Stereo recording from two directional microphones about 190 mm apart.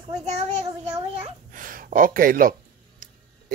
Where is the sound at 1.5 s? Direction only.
45° right (ahead or behind).